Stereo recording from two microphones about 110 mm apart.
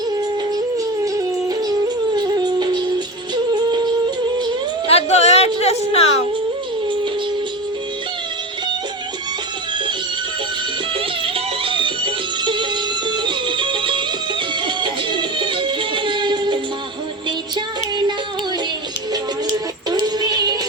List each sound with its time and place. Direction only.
1.0 s music: 35° right (ahead or behind)
4.9 s a sound: 80° left
11.3 s music: 50° right (ahead or behind)
19.9 s synthetic singing: 40° right (ahead or behind)